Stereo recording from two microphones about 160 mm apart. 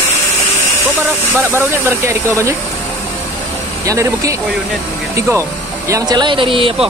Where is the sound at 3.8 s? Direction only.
20° right (ahead or behind).